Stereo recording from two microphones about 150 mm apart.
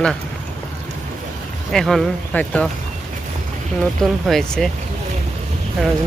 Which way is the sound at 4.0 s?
5° left (ahead or behind).